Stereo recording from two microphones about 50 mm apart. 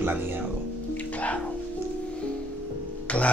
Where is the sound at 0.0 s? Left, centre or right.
Right.